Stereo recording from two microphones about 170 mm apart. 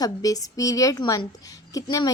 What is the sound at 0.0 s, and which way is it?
Speech, 20° left (ahead or behind).